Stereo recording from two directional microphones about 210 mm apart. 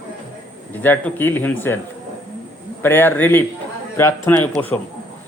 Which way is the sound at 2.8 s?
10° left (ahead or behind).